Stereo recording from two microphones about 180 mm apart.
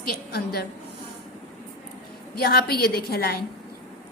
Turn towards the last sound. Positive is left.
turn(degrees=60)  # may be behind; listen again after turning